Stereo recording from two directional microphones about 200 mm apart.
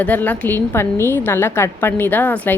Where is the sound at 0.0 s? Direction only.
10° left (ahead or behind).